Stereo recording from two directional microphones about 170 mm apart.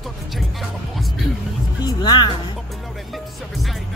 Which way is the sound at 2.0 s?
25° left (ahead or behind).